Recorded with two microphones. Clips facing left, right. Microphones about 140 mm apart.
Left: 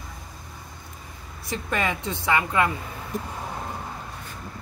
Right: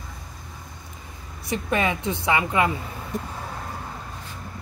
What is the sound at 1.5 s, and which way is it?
Speech, 20° right (ahead or behind).